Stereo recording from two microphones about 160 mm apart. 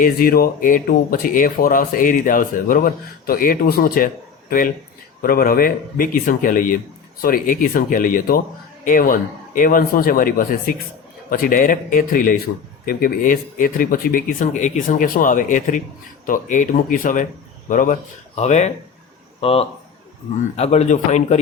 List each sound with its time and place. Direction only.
0.0 s speech: 65° left (ahead or behind)
18.3 s a man's voice: 45° left (ahead or behind)